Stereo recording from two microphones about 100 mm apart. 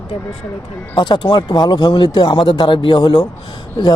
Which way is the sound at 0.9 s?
50° left (ahead or behind).